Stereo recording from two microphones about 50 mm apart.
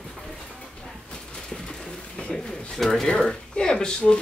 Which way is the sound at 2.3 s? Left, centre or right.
Centre.